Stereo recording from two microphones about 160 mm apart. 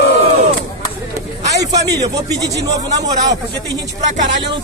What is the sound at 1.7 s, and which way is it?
Speech, 20° right (ahead or behind).